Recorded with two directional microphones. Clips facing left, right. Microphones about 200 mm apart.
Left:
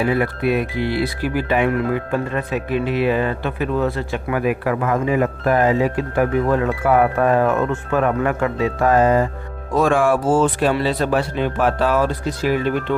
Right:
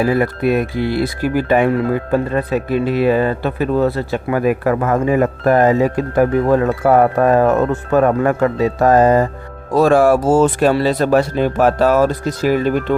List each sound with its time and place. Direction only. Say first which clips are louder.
0.0 s speech: right 3 dB; 40° right (ahead or behind)